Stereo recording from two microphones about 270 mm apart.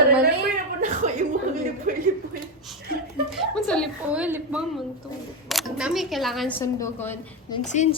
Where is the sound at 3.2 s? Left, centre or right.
Centre.